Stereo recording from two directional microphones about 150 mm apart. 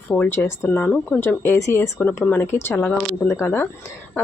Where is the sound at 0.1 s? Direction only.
15° left (ahead or behind).